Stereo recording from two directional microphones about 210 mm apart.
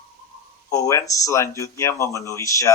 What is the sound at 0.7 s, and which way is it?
Speech, 15° left (ahead or behind).